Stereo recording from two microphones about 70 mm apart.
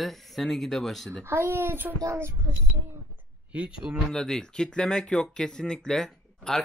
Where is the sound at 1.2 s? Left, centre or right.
Right.